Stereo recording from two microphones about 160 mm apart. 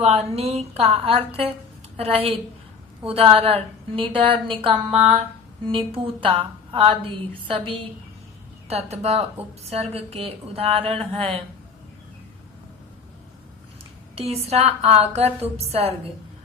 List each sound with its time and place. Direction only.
0.1 s a woman's voice: 40° right (ahead or behind)
14.3 s a woman's voice: 40° right (ahead or behind)